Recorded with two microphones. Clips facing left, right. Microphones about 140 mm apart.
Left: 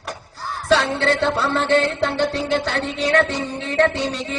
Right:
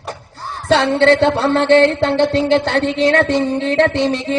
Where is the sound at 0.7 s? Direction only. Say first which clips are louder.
Right 6 dB; 65° right (ahead or behind).